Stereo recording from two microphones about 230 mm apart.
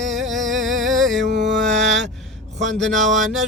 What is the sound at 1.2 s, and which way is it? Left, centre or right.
Mantra, right.